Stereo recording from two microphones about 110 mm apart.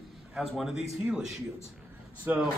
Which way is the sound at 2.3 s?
15° right (ahead or behind).